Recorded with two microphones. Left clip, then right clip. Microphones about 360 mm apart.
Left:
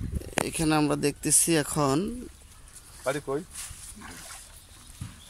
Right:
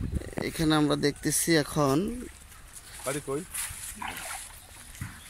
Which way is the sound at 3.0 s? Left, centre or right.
Left.